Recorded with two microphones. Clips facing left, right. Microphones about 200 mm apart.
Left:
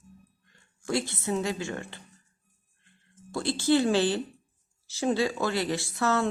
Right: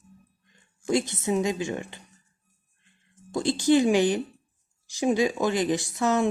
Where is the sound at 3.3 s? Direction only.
15° right (ahead or behind).